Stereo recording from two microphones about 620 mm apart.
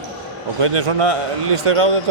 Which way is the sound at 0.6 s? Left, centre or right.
Right.